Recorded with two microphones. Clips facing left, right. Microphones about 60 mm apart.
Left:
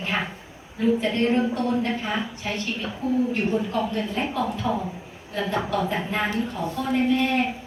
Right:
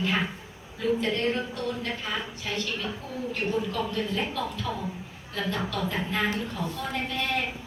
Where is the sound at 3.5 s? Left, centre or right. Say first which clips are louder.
Left 4 dB; left.